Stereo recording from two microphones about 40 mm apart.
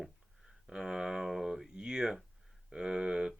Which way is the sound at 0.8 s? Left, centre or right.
Centre.